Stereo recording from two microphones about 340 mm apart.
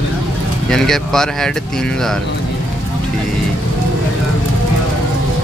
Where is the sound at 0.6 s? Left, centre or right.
Centre.